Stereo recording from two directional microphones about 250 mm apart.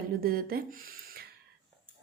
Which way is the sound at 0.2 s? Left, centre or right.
Right.